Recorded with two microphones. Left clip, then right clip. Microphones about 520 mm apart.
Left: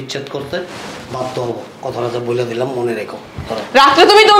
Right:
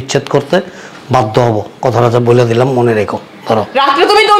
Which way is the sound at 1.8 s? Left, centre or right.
Right.